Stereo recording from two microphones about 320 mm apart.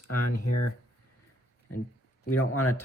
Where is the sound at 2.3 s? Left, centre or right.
Left.